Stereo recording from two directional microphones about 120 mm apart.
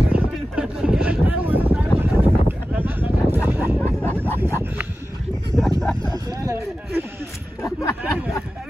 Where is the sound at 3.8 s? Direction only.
15° left (ahead or behind).